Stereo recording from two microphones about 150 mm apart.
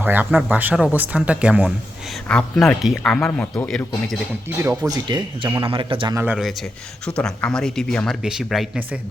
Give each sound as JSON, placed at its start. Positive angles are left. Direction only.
{"t": 0.0, "sound": "speech", "side_deg": -10}
{"t": 2.2, "sound": "speech", "side_deg": 5}
{"t": 4.9, "sound": "a man's voice", "side_deg": -30}
{"t": 6.1, "sound": "speech", "side_deg": -10}
{"t": 7.0, "sound": "speech", "side_deg": 5}